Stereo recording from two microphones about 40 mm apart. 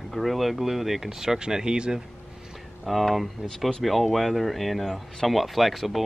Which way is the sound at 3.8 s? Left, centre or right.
Centre.